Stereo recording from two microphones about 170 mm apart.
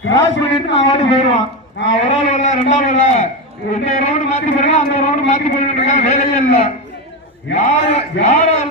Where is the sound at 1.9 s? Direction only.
45° left (ahead or behind).